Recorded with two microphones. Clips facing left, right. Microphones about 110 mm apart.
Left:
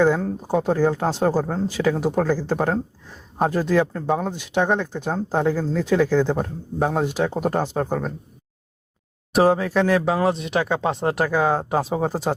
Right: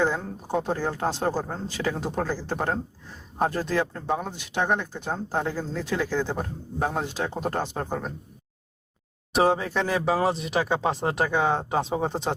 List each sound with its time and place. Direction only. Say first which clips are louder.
0.2 s speech: left 6 dB; 10° left (ahead or behind)
9.3 s speech: left 5 dB; centre (ahead or behind)